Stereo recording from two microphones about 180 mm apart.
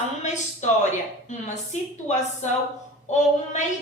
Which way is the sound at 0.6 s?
40° left (ahead or behind).